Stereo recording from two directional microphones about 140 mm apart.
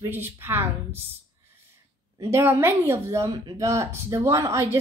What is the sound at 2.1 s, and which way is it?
Speech, 20° right (ahead or behind).